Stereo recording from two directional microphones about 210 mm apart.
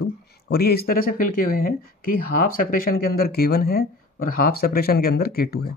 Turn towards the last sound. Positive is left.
turn(degrees=45)  # may be behind; listen again after turning